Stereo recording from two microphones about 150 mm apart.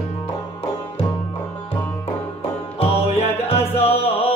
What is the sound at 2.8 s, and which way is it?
Music, 45° left (ahead or behind).